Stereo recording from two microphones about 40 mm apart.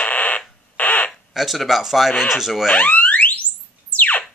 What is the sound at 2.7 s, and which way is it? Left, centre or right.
Alarm, left.